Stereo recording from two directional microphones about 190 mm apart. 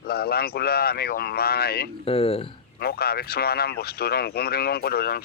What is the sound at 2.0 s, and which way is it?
Speech, 30° left (ahead or behind).